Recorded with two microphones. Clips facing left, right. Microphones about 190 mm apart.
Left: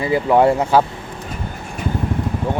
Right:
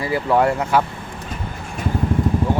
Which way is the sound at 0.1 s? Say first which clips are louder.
Left 4 dB; 20° left (ahead or behind).